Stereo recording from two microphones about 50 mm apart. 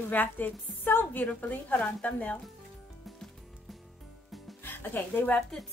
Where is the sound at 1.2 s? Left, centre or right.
Left.